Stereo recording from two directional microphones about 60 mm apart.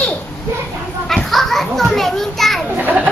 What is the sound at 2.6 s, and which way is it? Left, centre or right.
Children playing, right.